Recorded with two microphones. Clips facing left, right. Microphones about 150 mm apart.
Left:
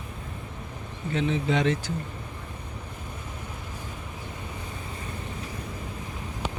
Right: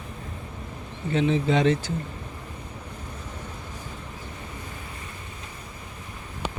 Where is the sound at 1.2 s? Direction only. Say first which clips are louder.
Right 3 dB; 30° right (ahead or behind).